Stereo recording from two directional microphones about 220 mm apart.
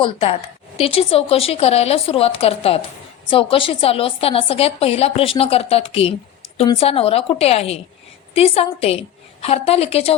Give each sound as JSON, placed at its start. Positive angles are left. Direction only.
{"t": 0.0, "sound": "a woman's voice", "side_deg": 25}